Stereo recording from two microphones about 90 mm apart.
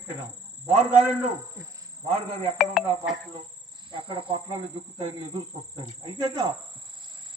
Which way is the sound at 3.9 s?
70° right (ahead or behind).